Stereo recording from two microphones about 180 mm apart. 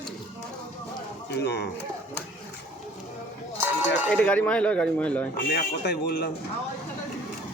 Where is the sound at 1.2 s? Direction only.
65° left (ahead or behind).